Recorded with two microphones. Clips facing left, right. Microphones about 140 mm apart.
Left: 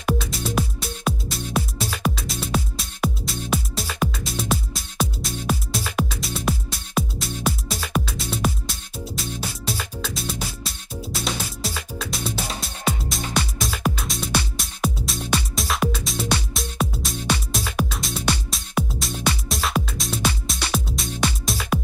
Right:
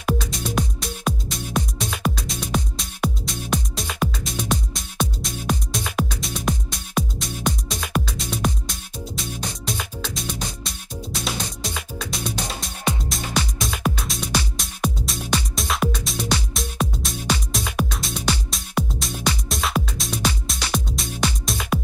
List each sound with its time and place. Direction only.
0.0 s music: 5° left (ahead or behind)